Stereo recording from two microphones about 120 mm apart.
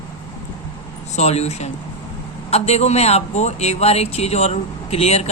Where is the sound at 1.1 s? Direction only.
65° left (ahead or behind).